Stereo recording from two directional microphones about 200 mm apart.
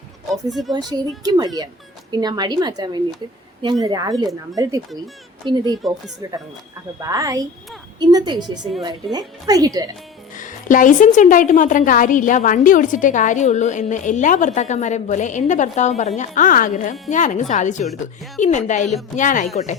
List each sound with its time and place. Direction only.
0.7 s speech: 20° right (ahead or behind)
10.3 s a woman's voice: 40° left (ahead or behind)